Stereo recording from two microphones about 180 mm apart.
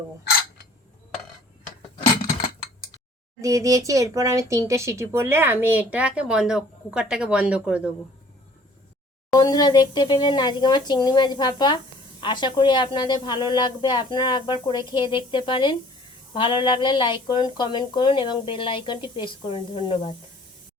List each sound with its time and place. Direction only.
3.4 s speech: 20° right (ahead or behind)
9.3 s a woman's voice: 20° left (ahead or behind)